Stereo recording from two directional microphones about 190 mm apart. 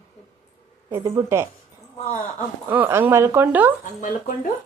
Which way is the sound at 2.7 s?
10° right (ahead or behind).